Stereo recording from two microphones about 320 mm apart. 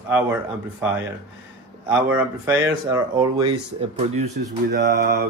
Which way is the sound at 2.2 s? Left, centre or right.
Centre.